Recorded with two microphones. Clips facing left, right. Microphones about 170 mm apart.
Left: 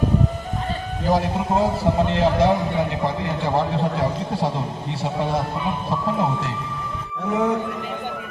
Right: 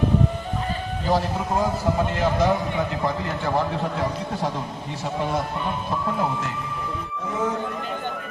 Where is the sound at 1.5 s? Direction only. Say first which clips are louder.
Left 3 dB; 25° left (ahead or behind).